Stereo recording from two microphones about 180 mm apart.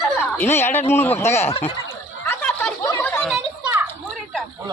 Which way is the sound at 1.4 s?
35° left (ahead or behind).